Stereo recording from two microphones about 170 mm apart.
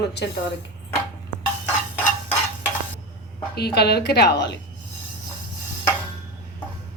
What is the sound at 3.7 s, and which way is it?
Speech, 75° left (ahead or behind).